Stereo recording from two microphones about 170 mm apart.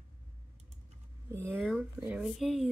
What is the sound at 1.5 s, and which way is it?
Speech, centre (ahead or behind).